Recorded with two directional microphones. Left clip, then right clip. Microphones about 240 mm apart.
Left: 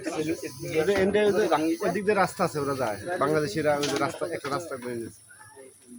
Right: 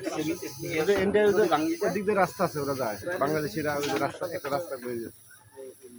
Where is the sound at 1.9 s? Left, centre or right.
Left.